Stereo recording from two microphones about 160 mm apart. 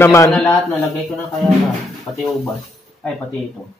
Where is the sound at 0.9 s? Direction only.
Centre (ahead or behind).